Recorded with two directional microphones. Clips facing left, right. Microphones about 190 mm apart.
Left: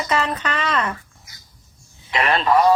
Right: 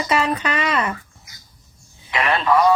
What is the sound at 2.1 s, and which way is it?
Speech, 35° left (ahead or behind).